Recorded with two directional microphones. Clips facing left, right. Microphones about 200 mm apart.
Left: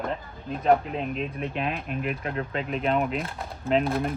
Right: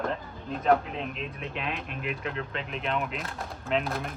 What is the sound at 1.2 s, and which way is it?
Speech, 45° left (ahead or behind).